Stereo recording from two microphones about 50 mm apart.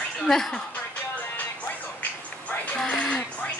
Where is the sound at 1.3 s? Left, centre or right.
Left.